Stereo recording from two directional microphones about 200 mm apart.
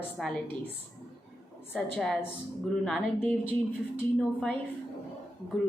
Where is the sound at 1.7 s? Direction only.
Centre (ahead or behind).